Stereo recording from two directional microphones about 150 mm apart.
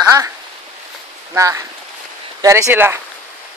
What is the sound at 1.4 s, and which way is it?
Speech, 20° right (ahead or behind).